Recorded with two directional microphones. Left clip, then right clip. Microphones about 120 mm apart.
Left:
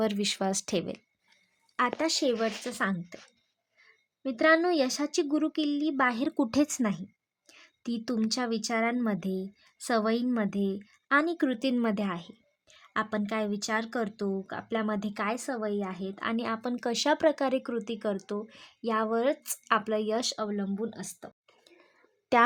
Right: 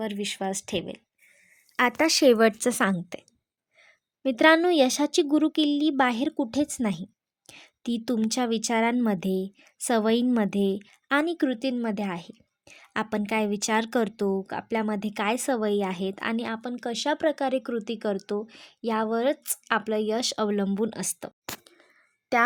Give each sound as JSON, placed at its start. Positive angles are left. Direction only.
{"t": 0.0, "sound": "speech", "side_deg": 20}
{"t": 2.0, "sound": "speech", "side_deg": -50}
{"t": 4.2, "sound": "a woman's voice", "side_deg": -40}
{"t": 6.3, "sound": "speech", "side_deg": 5}
{"t": 7.4, "sound": "speech", "side_deg": -30}
{"t": 11.3, "sound": "speech", "side_deg": -10}
{"t": 12.1, "sound": "a woman's voice", "side_deg": -25}
{"t": 16.3, "sound": "speech", "side_deg": -15}
{"t": 20.3, "sound": "speech", "side_deg": -55}